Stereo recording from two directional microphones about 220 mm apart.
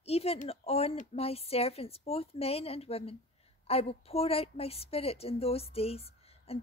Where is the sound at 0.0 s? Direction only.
25° left (ahead or behind).